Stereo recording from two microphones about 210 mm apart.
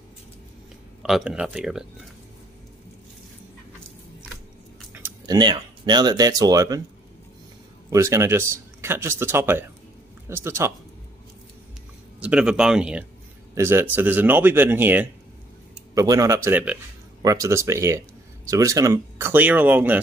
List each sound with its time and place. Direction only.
1.0 s speech: centre (ahead or behind)
4.9 s a sound: 10° right (ahead or behind)
5.4 s speech: 20° right (ahead or behind)
7.9 s speech: 15° right (ahead or behind)
12.2 s speech: 5° right (ahead or behind)